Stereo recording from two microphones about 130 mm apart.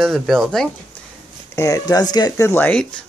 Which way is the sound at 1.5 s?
25° left (ahead or behind).